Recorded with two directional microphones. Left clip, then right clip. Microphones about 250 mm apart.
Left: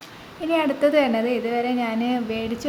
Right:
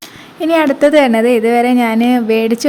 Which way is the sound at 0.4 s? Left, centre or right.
Right.